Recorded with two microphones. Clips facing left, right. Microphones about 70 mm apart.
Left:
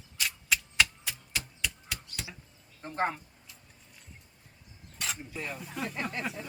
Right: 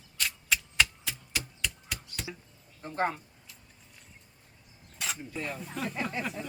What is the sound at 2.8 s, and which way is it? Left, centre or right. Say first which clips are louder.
Speech: even; left.